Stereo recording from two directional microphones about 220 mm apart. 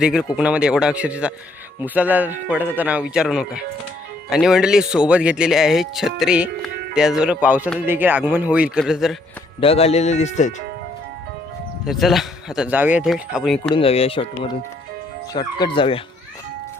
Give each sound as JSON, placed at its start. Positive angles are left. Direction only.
{"t": 0.0, "sound": "a man's voice", "side_deg": -5}
{"t": 9.6, "sound": "speech", "side_deg": 25}
{"t": 11.9, "sound": "speech", "side_deg": 0}
{"t": 13.7, "sound": "speech", "side_deg": 25}